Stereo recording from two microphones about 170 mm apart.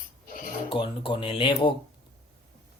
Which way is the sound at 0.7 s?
30° left (ahead or behind).